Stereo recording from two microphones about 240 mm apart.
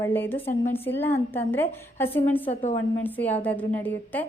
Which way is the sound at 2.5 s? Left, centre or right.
Left.